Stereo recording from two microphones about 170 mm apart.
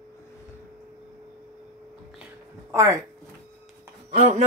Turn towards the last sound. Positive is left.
turn(degrees=-35)  # may be behind; listen again after turning